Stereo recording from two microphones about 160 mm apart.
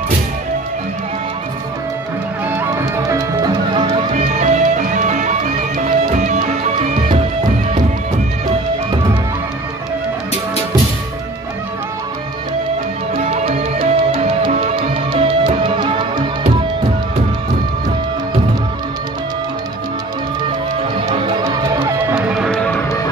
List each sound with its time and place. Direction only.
2.5 s music: 20° right (ahead or behind)
4.1 s music: 45° right (ahead or behind)
13.2 s music: 40° right (ahead or behind)
21.1 s music: 30° right (ahead or behind)
22.1 s music: 5° right (ahead or behind)